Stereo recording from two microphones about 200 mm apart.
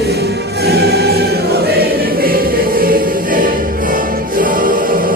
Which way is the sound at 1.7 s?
50° right (ahead or behind).